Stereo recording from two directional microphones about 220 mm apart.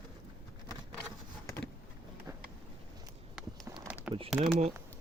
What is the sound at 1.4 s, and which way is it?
Vehicle, 10° left (ahead or behind).